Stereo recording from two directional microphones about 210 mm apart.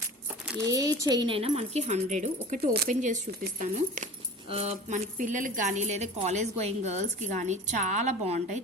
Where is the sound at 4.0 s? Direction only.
40° right (ahead or behind).